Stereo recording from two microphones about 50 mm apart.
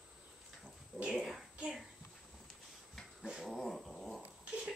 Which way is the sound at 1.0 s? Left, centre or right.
Centre.